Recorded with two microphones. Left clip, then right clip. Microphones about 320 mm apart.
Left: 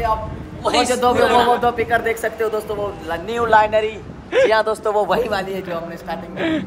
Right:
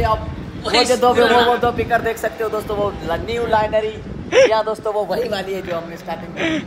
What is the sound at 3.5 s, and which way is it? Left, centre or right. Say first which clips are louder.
A man's voice: left 4 dB; left.